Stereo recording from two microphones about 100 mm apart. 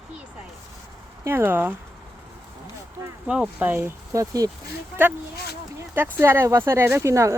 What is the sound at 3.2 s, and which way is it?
Speech, 10° right (ahead or behind).